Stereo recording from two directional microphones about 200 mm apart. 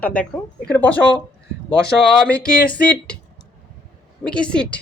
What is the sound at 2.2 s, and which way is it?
Speech, 5° left (ahead or behind).